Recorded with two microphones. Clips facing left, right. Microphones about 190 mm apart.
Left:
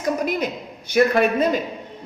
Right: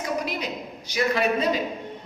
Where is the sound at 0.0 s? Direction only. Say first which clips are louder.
Left 6 dB; 50° left (ahead or behind).